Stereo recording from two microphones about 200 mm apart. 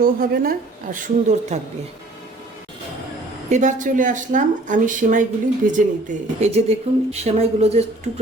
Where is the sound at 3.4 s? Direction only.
35° right (ahead or behind).